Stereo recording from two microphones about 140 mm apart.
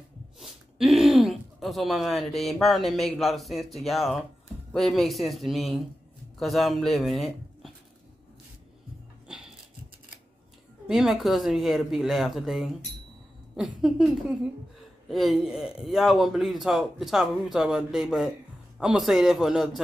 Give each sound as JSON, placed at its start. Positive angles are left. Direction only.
{"t": 0.4, "sound": "a man's voice", "side_deg": 0}
{"t": 10.9, "sound": "a man's voice", "side_deg": -5}